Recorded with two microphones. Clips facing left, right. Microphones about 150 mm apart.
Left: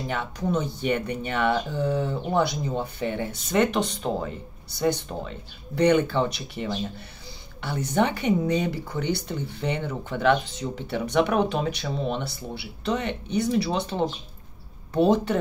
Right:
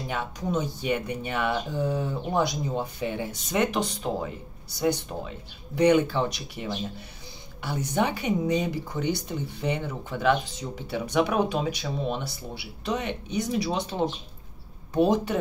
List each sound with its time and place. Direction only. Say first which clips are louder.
0.1 s speech: left 2 dB; 10° right (ahead or behind)